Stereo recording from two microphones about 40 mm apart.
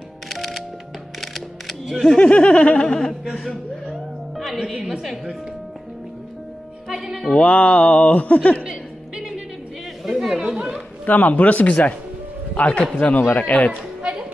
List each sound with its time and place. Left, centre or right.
0.3 s music: centre
1.2 s camera: centre
2.1 s a sound: left
3.3 s a woman's voice: centre
6.9 s speech: centre
7.3 s a sound: left
8.6 s music: centre
10.0 s chatter: centre
10.4 s speech: centre
11.1 s speech: left
12.5 s a sound: left